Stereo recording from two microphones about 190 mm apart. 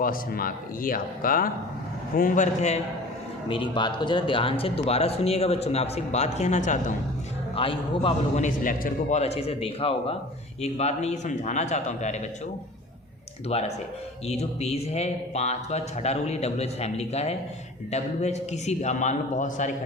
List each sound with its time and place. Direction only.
0.0 s speech: 50° left (ahead or behind)
3.5 s speech: 25° left (ahead or behind); by 6.9 s 40° left (ahead or behind)
7.5 s a man's voice: 30° left (ahead or behind)
8.4 s speech: 45° left (ahead or behind)
13.5 s speech: 35° left (ahead or behind)